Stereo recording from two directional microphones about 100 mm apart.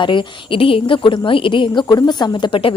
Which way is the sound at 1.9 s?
40° left (ahead or behind).